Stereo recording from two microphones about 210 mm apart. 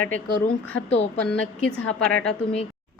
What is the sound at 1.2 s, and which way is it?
A woman's voice, 5° left (ahead or behind).